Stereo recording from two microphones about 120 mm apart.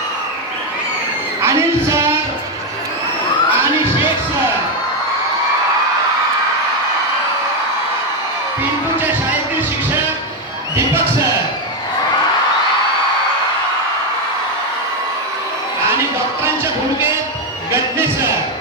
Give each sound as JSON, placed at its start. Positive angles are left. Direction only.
{"t": 1.4, "sound": "music", "side_deg": -25}
{"t": 10.8, "sound": "a sound", "side_deg": -25}
{"t": 17.7, "sound": "music", "side_deg": -20}